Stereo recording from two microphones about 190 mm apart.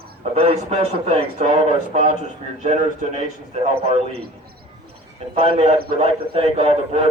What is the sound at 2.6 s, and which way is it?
Speech, 40° right (ahead or behind).